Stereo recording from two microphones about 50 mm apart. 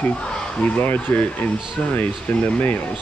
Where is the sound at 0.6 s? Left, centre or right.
Left.